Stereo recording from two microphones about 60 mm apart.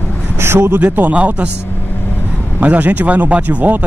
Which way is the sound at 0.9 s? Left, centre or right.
Right.